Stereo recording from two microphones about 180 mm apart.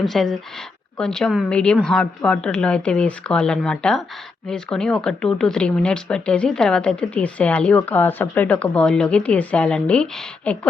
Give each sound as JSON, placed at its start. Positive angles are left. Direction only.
{"t": 0.0, "sound": "speech", "side_deg": 0}